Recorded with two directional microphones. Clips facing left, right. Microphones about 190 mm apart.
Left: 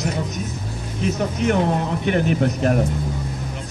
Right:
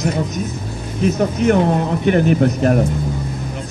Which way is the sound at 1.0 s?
45° right (ahead or behind).